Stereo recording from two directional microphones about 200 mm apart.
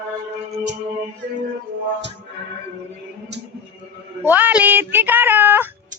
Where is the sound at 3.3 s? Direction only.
60° right (ahead or behind).